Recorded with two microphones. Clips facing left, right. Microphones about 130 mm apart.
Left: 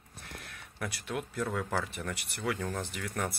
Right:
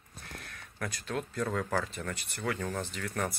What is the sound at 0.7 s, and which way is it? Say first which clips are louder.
Speech: right 1 dB; 15° left (ahead or behind).